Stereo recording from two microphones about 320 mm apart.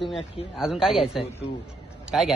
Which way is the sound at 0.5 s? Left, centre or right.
Centre.